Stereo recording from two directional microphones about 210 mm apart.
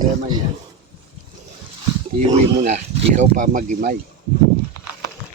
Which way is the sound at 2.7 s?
35° right (ahead or behind).